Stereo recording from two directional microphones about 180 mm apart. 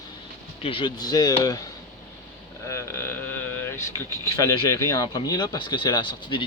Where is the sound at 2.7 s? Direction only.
15° left (ahead or behind).